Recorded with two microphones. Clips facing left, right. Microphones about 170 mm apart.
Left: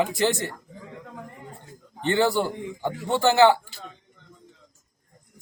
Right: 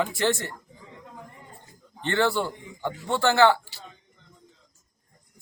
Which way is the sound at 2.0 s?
15° left (ahead or behind).